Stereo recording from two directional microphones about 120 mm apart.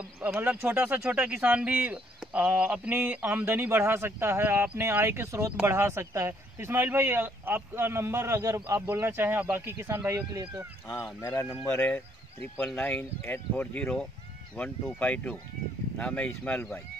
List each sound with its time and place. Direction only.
0.2 s speech: 15° right (ahead or behind)
11.1 s speech: 20° left (ahead or behind)